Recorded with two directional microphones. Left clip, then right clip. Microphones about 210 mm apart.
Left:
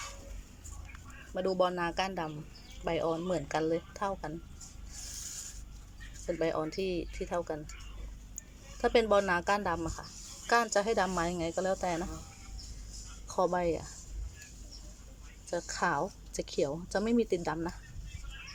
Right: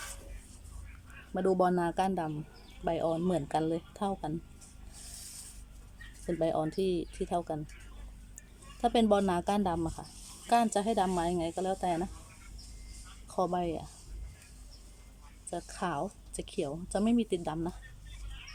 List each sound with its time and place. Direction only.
1.3 s speech: 15° right (ahead or behind)
6.4 s speech: 15° right (ahead or behind)
8.8 s speech: 10° right (ahead or behind)
13.2 s speech: 10° right (ahead or behind)
15.4 s speech: 5° right (ahead or behind)